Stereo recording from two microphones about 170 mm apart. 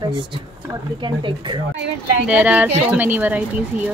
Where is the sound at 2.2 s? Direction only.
10° right (ahead or behind).